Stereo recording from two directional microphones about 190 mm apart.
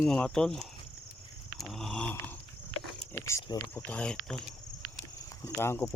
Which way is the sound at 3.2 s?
15° left (ahead or behind).